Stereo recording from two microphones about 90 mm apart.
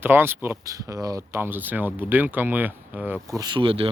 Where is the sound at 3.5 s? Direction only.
70° right (ahead or behind).